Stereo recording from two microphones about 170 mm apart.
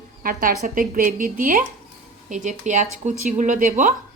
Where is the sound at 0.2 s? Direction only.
55° right (ahead or behind).